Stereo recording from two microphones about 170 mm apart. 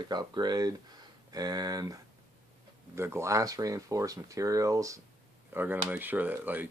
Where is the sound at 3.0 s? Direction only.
15° right (ahead or behind).